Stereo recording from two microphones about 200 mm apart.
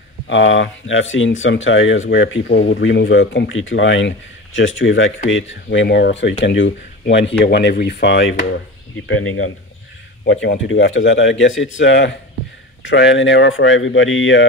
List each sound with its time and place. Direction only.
0.3 s speech: 70° left (ahead or behind)
9.0 s speech: 85° left
10.2 s speech: 70° left (ahead or behind)